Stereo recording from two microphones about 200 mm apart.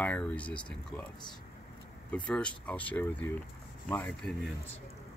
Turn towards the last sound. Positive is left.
turn(degrees=5)  # may be behind; listen again after turning